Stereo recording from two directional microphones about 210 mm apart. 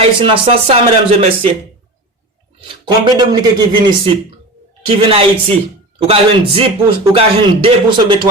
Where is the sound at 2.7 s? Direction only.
20° right (ahead or behind).